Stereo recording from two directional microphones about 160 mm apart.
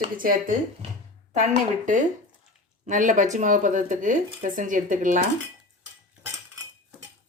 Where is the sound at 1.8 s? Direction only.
55° right (ahead or behind).